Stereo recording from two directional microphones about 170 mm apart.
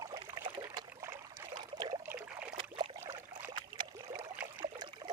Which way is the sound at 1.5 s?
25° right (ahead or behind).